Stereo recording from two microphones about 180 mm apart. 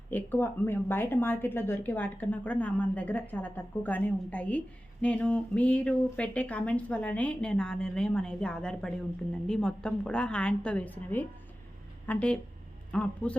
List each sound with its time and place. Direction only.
0.1 s a woman's voice: 10° left (ahead or behind)